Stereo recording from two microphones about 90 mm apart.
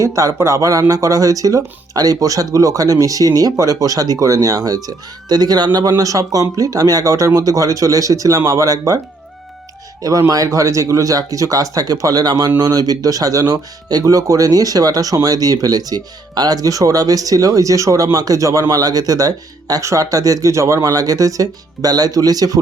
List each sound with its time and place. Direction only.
0.0 s speech: 40° right (ahead or behind)
10.0 s speech: 40° right (ahead or behind)